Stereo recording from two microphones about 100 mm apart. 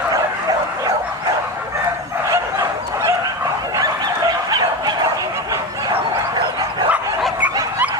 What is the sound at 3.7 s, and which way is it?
Bow-wow, 40° right (ahead or behind).